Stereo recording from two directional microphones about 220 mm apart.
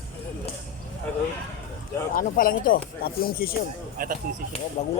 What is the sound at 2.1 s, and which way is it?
Speech, 40° left (ahead or behind).